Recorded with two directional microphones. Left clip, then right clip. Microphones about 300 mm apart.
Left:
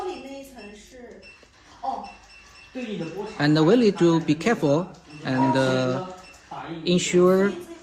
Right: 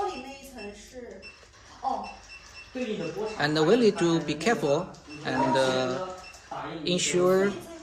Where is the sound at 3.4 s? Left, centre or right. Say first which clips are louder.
Left 4 dB; left.